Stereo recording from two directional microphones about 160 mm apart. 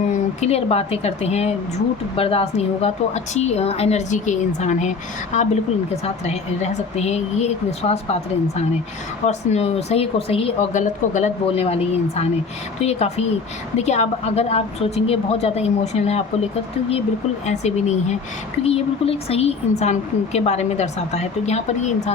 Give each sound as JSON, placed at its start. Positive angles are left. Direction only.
{"t": 0.1, "sound": "a woman's voice", "side_deg": 45}
{"t": 9.2, "sound": "a woman's voice", "side_deg": 45}